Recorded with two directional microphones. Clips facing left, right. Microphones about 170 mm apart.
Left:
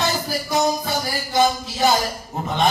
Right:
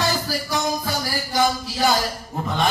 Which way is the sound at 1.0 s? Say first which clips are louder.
Left 3 dB; 20° left (ahead or behind).